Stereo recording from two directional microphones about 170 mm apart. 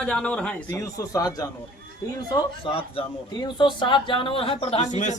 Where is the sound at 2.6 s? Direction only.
30° left (ahead or behind).